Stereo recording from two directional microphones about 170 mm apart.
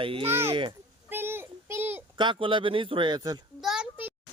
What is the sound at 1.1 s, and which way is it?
Child singing, 15° right (ahead or behind).